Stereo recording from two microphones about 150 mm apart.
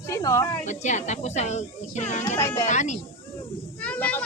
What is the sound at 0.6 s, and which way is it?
A woman's voice, 50° left (ahead or behind).